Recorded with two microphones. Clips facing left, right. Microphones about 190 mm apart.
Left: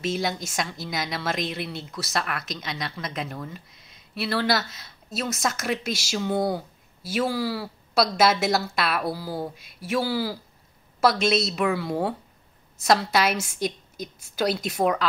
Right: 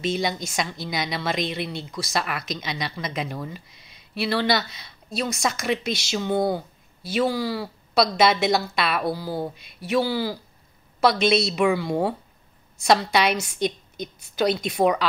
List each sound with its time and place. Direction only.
0.0 s a woman's voice: 5° left (ahead or behind)
3.7 s a sound: 75° right (ahead or behind)
4.1 s a woman's voice: centre (ahead or behind)